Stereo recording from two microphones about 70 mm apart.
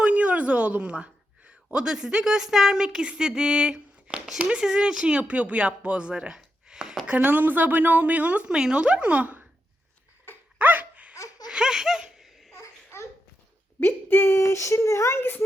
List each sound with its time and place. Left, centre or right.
0.0 s a woman's voice: centre
7.1 s speech: right
10.6 s dog: right
11.4 s laughter: centre
12.5 s babbling: left
13.7 s speech: left
14.4 s speech: left